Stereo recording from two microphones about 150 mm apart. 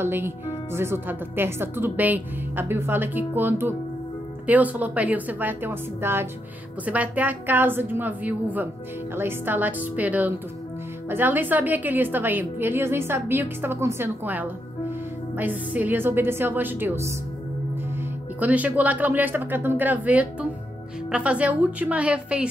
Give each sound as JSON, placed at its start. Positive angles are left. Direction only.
{"t": 0.0, "sound": "a woman's voice", "side_deg": -15}
{"t": 18.4, "sound": "a woman's voice", "side_deg": -10}